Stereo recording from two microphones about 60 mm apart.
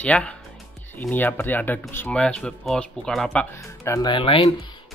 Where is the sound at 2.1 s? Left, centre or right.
Centre.